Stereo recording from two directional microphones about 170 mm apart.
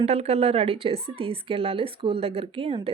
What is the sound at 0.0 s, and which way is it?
A woman's voice, 35° right (ahead or behind).